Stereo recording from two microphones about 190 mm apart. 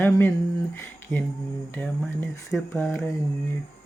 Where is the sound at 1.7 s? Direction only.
10° left (ahead or behind).